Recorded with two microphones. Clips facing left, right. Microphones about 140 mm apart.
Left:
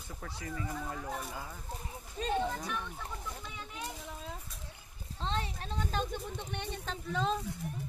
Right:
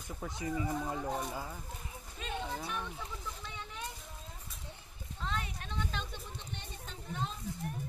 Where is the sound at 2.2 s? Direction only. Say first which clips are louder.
Left 9 dB; 35° left (ahead or behind).